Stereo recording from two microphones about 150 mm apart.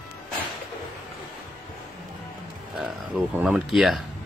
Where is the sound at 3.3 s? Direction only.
5° right (ahead or behind).